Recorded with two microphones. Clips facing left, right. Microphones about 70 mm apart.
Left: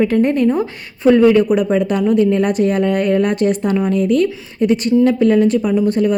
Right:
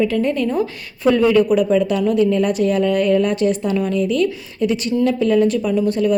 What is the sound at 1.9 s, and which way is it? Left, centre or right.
A woman's voice, left.